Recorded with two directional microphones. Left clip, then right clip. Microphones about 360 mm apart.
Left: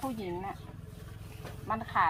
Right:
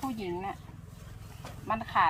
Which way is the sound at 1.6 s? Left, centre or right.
Right.